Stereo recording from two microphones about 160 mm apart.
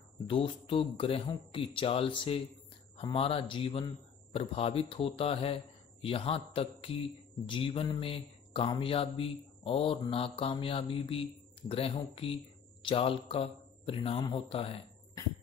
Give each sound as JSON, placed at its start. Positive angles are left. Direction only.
{"t": 0.3, "sound": "speech", "side_deg": 35}